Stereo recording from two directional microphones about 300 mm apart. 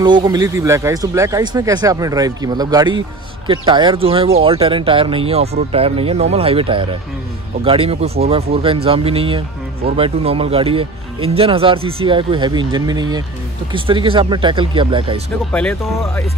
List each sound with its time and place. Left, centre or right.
0.0 s speech: centre